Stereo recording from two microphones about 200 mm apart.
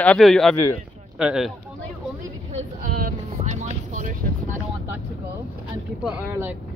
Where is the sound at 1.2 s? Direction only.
5° right (ahead or behind).